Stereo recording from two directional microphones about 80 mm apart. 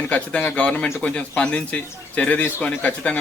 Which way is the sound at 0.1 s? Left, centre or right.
Centre.